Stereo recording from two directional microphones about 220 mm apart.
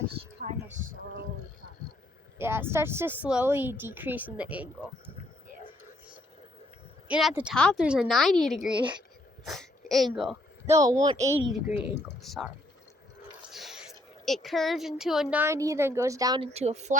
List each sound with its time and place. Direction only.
2.4 s speech: 10° right (ahead or behind)
7.1 s a woman's voice: 5° right (ahead or behind)
9.4 s a sound: centre (ahead or behind)
10.7 s speech: 15° right (ahead or behind)
12.2 s a woman's voice: centre (ahead or behind)
13.5 s a sound: centre (ahead or behind)
14.3 s speech: centre (ahead or behind); by 16.5 s 15° right (ahead or behind)
16.5 s a woman's voice: 30° right (ahead or behind)